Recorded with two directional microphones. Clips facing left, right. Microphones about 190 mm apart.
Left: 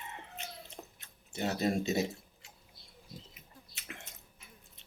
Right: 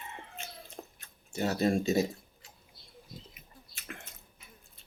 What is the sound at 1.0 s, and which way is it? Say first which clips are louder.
Speech: right 3 dB; 20° left (ahead or behind).